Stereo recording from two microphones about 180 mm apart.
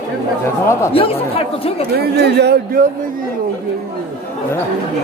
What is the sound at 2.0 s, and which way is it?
Speech, 65° right (ahead or behind).